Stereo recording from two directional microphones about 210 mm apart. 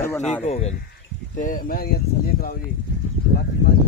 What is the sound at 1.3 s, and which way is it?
Speech, 40° left (ahead or behind).